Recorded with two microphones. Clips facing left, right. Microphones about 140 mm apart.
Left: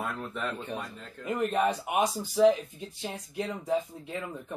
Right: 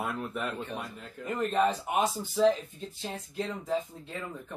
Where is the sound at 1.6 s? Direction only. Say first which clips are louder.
Right 2 dB; 15° left (ahead or behind).